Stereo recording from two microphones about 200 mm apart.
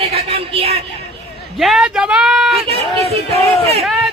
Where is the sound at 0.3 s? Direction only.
30° right (ahead or behind).